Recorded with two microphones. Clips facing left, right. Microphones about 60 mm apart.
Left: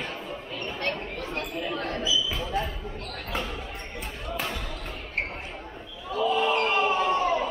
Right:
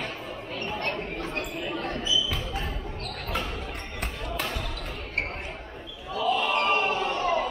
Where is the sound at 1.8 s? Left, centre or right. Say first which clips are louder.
Left 1 dB; left.